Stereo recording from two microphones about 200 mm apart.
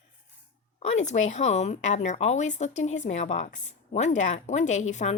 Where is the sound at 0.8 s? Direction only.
35° left (ahead or behind).